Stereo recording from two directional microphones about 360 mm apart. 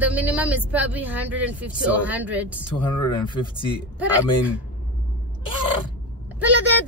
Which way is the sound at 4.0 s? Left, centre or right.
Centre.